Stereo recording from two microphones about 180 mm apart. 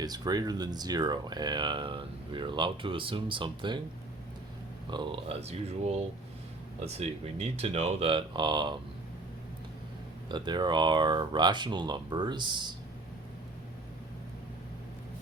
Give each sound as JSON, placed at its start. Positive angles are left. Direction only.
{"t": 0.0, "sound": "speech", "side_deg": -20}
{"t": 4.9, "sound": "speech", "side_deg": -25}
{"t": 10.2, "sound": "speech", "side_deg": -25}